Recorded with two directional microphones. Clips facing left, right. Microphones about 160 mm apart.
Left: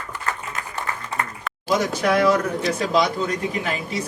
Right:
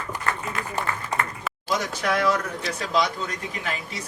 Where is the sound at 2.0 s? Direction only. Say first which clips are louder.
Left 5 dB; 15° left (ahead or behind).